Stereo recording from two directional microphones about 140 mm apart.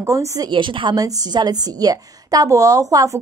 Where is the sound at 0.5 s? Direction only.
35° right (ahead or behind).